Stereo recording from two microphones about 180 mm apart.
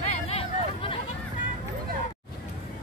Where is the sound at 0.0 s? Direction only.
35° left (ahead or behind).